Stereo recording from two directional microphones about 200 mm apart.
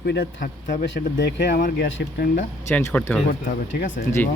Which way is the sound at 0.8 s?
60° left (ahead or behind).